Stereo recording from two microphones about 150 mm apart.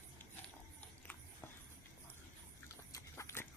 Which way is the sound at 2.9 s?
20° left (ahead or behind).